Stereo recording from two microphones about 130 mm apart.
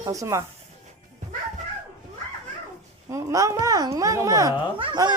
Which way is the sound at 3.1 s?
25° right (ahead or behind).